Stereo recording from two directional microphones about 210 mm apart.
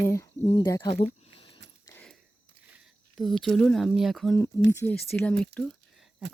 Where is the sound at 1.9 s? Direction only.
5° left (ahead or behind).